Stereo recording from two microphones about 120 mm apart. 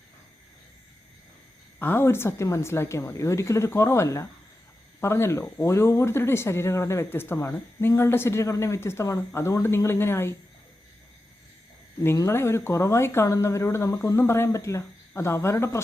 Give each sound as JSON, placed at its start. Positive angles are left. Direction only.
{"t": 1.8, "sound": "speech", "side_deg": 20}
{"t": 12.0, "sound": "speech", "side_deg": 25}